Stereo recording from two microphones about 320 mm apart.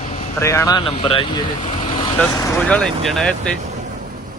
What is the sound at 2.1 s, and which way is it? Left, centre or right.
Speech, centre.